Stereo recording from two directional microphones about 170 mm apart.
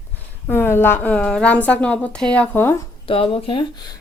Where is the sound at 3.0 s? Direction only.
35° left (ahead or behind).